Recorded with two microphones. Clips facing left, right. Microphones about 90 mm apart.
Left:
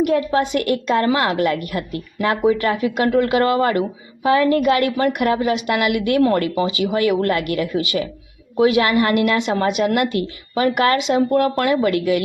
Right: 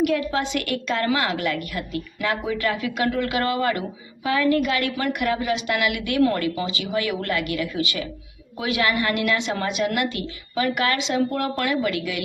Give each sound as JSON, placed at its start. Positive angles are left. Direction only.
{"t": 0.0, "sound": "a woman's voice", "side_deg": 35}
{"t": 6.6, "sound": "a woman's voice", "side_deg": 55}